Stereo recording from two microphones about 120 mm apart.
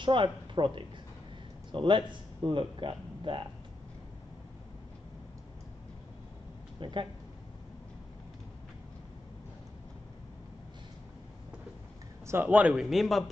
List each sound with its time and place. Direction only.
0.0 s speech: 45° right (ahead or behind)
6.8 s speech: 40° right (ahead or behind)
12.3 s a man's voice: 15° right (ahead or behind)